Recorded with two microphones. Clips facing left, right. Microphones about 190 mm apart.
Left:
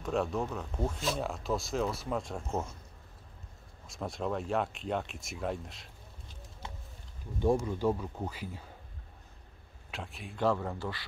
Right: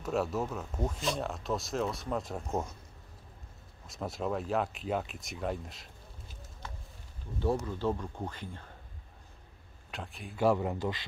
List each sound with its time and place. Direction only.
0.0 s speech: 5° right (ahead or behind)
3.8 s speech: centre (ahead or behind)
7.3 s speech: 15° left (ahead or behind)
9.8 s speech: centre (ahead or behind)
10.4 s a man's voice: 15° right (ahead or behind)